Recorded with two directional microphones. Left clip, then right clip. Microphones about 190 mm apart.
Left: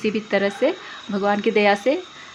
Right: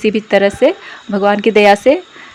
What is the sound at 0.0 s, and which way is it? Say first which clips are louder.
Speech: right 9 dB; 30° right (ahead or behind).